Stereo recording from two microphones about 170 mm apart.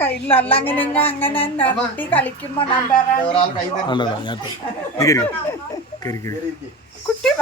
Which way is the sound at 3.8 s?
25° left (ahead or behind).